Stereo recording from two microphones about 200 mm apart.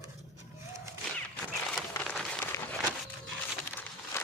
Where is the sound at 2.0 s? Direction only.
Centre (ahead or behind).